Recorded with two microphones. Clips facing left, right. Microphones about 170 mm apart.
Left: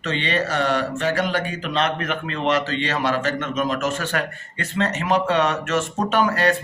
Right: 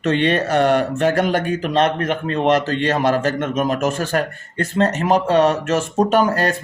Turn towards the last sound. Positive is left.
turn(degrees=-40)  # may be behind; listen again after turning